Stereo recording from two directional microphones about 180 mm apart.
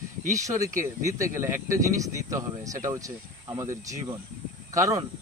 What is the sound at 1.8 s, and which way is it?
Speech, 20° right (ahead or behind).